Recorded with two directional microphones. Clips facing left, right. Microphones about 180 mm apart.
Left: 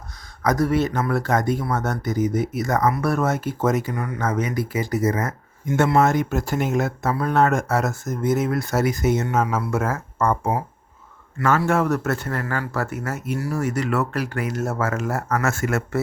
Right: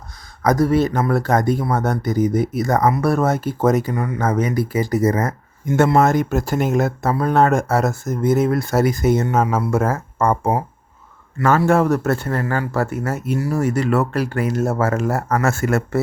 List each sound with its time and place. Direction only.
0.4 s speech: 30° right (ahead or behind)